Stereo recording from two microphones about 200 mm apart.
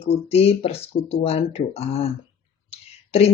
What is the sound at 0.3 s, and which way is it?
Speech, 30° left (ahead or behind).